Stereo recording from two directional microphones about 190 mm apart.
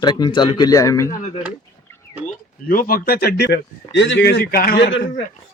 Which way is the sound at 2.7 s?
50° left (ahead or behind).